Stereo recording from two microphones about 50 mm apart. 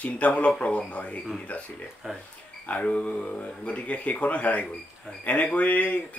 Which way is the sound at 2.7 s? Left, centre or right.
Left.